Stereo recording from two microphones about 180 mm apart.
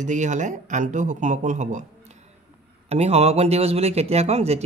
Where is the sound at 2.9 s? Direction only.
35° right (ahead or behind).